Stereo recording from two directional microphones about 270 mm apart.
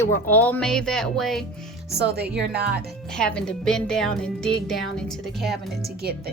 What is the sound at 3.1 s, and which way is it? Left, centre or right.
Speech, centre.